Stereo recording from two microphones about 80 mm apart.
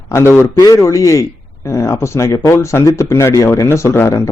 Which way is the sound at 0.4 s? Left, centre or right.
Left.